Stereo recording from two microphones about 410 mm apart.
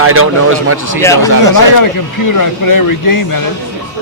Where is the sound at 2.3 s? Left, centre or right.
Left.